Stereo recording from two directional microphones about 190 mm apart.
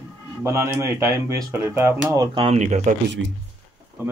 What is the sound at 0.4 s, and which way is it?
Speech, 15° right (ahead or behind).